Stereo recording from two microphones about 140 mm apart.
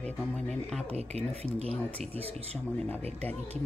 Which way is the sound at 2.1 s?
45° right (ahead or behind).